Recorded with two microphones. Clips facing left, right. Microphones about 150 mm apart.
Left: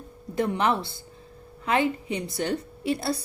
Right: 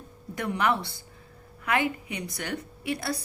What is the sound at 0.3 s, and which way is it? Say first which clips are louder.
A woman's voice: left 3 dB; 25° left (ahead or behind).